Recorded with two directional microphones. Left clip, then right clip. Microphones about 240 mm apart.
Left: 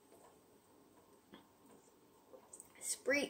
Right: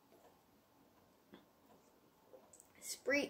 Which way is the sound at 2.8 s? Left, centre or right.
Centre.